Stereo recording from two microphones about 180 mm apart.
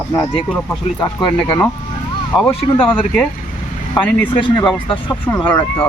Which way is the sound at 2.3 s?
25° left (ahead or behind).